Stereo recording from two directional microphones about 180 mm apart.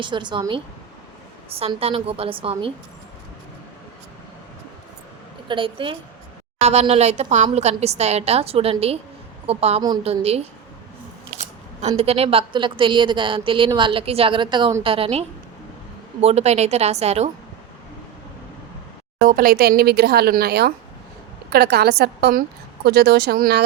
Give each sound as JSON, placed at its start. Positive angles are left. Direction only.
{"t": 0.0, "sound": "a woman's voice", "side_deg": -25}
{"t": 5.5, "sound": "a woman's voice", "side_deg": -30}
{"t": 16.2, "sound": "a woman's voice", "side_deg": -35}
{"t": 19.2, "sound": "a woman's voice", "side_deg": -50}